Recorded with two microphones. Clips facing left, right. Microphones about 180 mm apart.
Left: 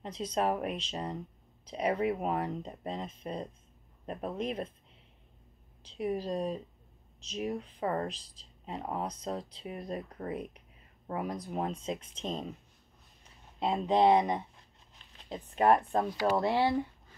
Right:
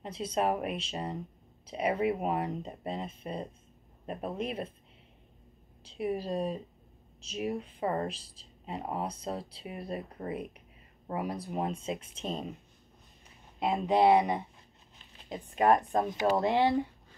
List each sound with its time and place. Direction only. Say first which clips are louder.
0.0 s speech: right 1 dB; 10° right (ahead or behind)
5.9 s speech: even; 10° right (ahead or behind)
13.6 s speech: right 1 dB; 10° right (ahead or behind)